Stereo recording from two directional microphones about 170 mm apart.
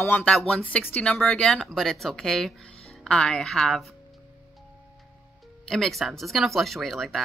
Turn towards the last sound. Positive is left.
turn(degrees=0)  # may be behind; listen again after turning